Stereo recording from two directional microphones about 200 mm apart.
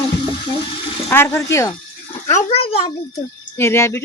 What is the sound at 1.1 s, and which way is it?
Speech, 10° left (ahead or behind).